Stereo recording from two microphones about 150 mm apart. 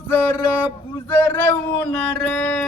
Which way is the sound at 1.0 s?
15° left (ahead or behind).